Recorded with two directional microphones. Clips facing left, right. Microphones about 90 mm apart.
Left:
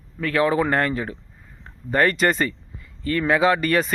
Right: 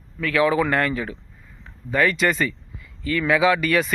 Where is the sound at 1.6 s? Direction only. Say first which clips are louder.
Left 1 dB; 45° left (ahead or behind).